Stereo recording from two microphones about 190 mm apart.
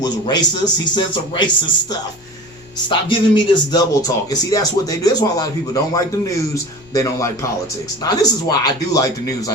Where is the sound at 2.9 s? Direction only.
25° left (ahead or behind).